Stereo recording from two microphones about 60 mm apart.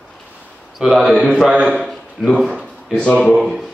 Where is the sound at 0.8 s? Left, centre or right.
Centre.